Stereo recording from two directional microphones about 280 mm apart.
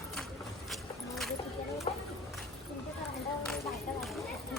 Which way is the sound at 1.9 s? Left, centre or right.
Left.